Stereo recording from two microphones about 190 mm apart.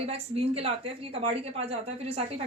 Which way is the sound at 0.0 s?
30° right (ahead or behind).